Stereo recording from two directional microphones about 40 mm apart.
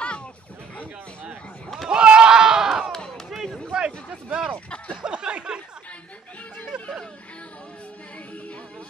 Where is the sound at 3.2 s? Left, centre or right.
Centre.